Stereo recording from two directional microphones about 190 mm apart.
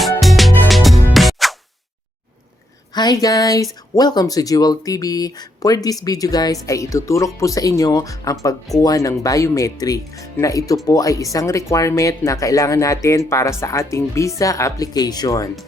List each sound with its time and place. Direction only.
0.2 s music: centre (ahead or behind)
2.9 s speech: 20° left (ahead or behind)